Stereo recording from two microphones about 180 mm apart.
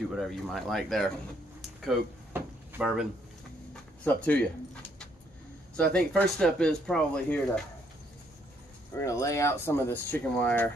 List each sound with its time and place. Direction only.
0.1 s speech: centre (ahead or behind)
2.3 s drawer open or close: 5° right (ahead or behind)
3.7 s a sound: 10° left (ahead or behind)
5.8 s speech: 5° left (ahead or behind)
8.9 s speech: 15° left (ahead or behind)